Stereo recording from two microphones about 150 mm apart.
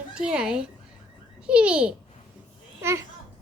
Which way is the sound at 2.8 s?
20° right (ahead or behind).